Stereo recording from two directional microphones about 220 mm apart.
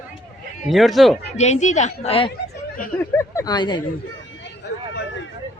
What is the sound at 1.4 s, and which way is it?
Speech, 30° left (ahead or behind).